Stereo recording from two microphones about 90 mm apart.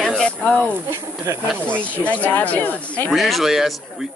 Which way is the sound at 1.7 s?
15° left (ahead or behind).